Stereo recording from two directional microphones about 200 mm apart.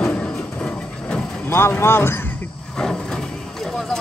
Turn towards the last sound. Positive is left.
turn(degrees=0)  # may be behind; listen again after turning